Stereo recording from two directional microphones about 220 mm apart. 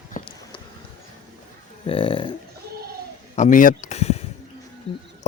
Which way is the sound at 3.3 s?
35° left (ahead or behind).